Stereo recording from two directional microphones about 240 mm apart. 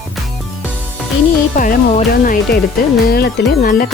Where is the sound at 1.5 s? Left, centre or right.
Left.